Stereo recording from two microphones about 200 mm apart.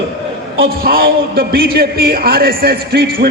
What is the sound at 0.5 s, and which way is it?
A man's voice, 50° right (ahead or behind).